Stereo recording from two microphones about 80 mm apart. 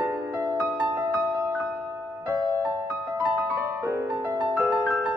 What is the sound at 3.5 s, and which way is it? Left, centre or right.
Music, right.